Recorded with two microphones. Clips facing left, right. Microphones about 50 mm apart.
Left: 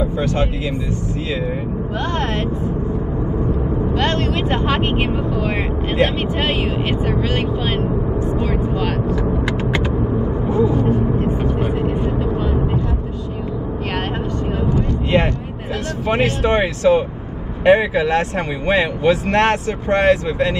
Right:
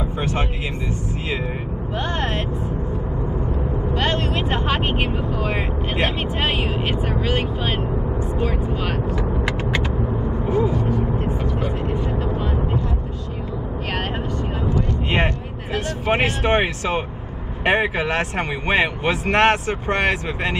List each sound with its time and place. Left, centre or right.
0.0 s vehicle: right
4.0 s vehicle: centre
10.7 s speech: left
11.2 s vehicle: left
14.9 s vehicle: right
16.1 s speech: right